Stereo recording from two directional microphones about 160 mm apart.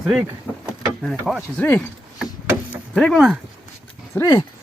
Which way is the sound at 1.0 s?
Centre (ahead or behind).